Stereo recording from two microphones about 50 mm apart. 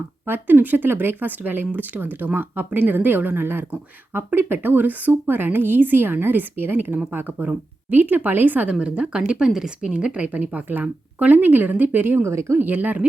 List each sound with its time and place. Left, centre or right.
0.3 s a woman's voice: right
5.1 s a woman's voice: right
8.8 s speech: right
12.2 s speech: right
12.5 s speech: right